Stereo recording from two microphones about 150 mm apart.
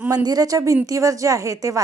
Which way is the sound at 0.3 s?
25° right (ahead or behind).